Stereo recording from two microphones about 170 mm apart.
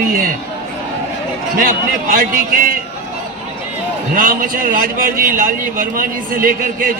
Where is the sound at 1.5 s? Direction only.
55° right (ahead or behind).